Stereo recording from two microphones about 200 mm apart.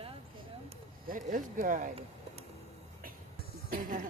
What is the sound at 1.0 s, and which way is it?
Speech, 40° right (ahead or behind).